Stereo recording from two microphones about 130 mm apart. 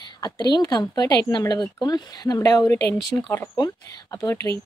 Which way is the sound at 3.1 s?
15° left (ahead or behind).